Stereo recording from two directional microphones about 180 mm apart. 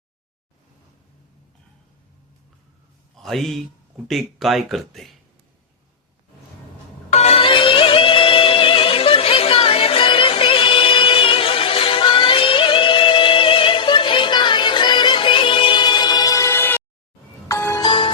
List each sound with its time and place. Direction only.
3.2 s a man's voice: centre (ahead or behind)
7.1 s music: 35° left (ahead or behind); by 17.8 s 15° left (ahead or behind)
17.8 s music: 30° left (ahead or behind)